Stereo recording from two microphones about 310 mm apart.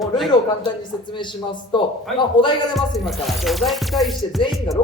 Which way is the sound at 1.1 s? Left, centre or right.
Centre.